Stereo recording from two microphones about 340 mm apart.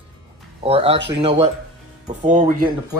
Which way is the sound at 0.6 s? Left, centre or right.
Centre.